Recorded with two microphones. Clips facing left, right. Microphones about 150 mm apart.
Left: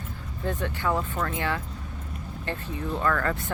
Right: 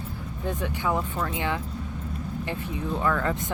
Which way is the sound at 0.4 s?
15° right (ahead or behind).